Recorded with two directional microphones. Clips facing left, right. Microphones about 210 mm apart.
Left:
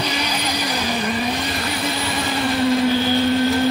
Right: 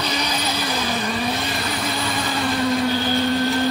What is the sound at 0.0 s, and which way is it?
Vehicle, 10° left (ahead or behind).